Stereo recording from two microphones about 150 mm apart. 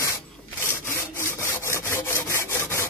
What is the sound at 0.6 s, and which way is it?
Sawing, 15° left (ahead or behind).